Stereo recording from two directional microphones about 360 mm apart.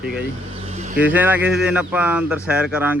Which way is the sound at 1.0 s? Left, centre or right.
Centre.